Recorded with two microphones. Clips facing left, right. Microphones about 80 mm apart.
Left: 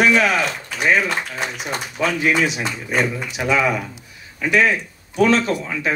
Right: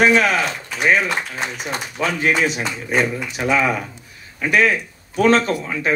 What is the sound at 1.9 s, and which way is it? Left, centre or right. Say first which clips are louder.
Speech: left 1 dB; right.